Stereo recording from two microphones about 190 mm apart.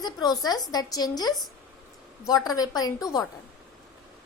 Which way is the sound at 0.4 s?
20° left (ahead or behind).